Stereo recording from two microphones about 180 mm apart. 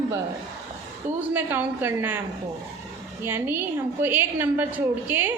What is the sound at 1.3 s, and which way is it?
Female singing, 10° right (ahead or behind).